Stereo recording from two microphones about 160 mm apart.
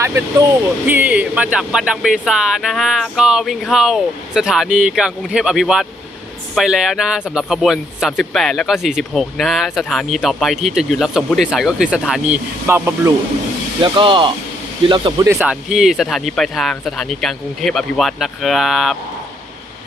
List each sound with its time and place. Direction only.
0.0 s speech: 20° right (ahead or behind)
13.8 s speech: 30° right (ahead or behind)
15.4 s speech: 5° right (ahead or behind)